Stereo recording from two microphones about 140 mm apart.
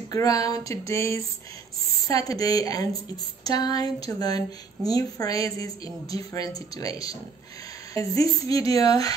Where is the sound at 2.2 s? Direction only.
25° left (ahead or behind).